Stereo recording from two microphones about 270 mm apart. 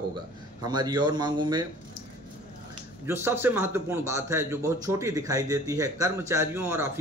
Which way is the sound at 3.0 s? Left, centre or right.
Centre.